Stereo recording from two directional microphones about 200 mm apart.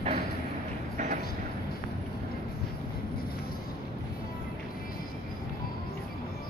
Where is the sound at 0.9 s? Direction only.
40° right (ahead or behind).